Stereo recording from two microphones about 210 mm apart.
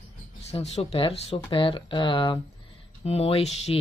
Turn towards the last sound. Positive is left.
turn(degrees=30)  # may be behind; listen again after turning